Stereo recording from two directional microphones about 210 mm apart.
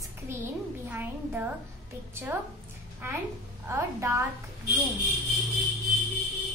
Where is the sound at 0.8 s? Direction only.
10° right (ahead or behind).